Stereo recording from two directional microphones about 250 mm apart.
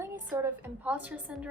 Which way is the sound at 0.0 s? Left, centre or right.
Centre.